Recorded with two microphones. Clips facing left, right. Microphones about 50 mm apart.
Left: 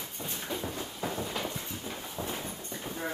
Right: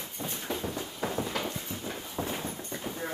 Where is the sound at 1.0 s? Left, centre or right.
Centre.